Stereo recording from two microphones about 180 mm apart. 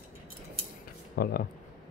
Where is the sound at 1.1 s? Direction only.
55° left (ahead or behind).